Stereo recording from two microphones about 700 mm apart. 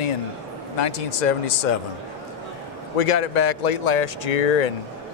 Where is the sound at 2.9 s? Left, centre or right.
Left.